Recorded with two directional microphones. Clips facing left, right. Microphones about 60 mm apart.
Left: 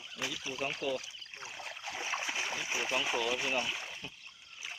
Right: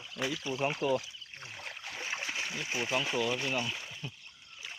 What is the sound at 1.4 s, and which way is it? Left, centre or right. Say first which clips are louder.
Boat: even; centre.